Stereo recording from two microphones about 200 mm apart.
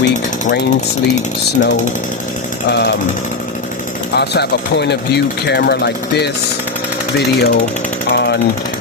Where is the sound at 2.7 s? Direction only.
60° left (ahead or behind).